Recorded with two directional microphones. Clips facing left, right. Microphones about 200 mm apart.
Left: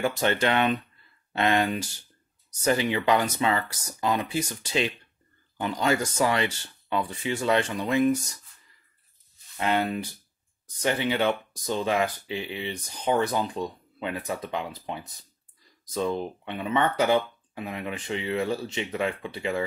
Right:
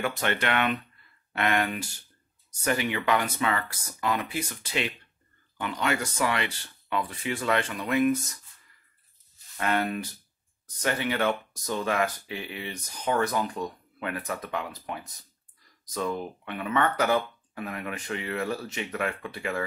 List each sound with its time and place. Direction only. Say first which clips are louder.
0.2 s speech: left 4 dB; 30° left (ahead or behind)
5.6 s speech: left 4 dB; 35° left (ahead or behind)
9.6 s speech: left 2 dB; 20° left (ahead or behind)